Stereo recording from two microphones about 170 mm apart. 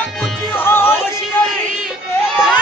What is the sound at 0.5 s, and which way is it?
Music, 15° left (ahead or behind).